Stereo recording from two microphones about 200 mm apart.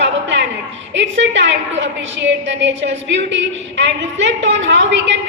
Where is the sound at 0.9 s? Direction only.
65° right (ahead or behind).